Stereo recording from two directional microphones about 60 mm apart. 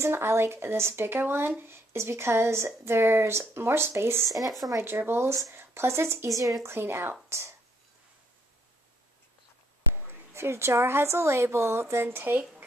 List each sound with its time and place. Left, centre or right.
0.0 s speech: right
4.3 s speech: right
4.8 s speech: right
6.3 s speech: right
6.6 s speech: right
9.9 s a woman's voice: right